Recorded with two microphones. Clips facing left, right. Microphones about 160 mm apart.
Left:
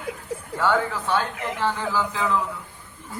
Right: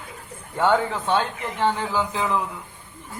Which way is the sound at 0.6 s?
20° right (ahead or behind).